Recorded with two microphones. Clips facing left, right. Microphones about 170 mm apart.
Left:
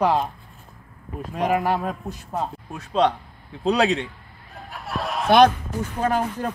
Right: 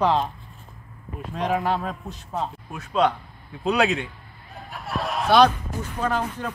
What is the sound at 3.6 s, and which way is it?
Speech, 35° left (ahead or behind).